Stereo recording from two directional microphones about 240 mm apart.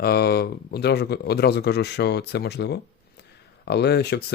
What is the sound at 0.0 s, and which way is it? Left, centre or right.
Speech, left.